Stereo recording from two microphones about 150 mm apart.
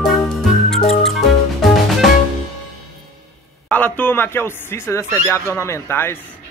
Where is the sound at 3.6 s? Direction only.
10° left (ahead or behind).